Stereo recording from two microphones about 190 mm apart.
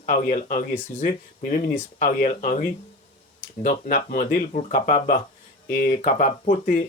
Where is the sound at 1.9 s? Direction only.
40° left (ahead or behind).